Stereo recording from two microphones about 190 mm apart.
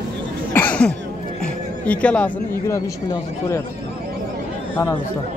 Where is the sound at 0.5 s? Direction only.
10° left (ahead or behind).